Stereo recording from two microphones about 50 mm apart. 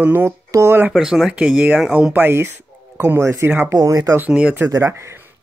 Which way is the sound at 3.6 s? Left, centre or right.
Right.